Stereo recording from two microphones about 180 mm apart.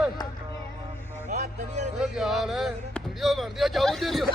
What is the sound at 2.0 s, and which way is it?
Speech, centre (ahead or behind).